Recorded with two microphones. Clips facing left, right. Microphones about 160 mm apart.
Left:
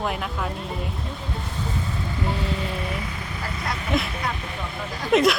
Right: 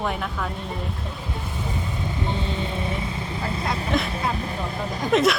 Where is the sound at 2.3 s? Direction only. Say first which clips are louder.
Left 1 dB; 25° right (ahead or behind).